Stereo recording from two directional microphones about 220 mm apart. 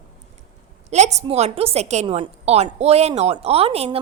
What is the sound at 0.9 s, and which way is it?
A woman's voice, 30° right (ahead or behind).